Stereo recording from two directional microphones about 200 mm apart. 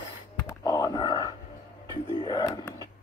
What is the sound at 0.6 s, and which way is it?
Whispering, 20° left (ahead or behind).